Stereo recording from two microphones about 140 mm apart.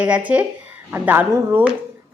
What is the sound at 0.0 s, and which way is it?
A woman's voice, 10° right (ahead or behind).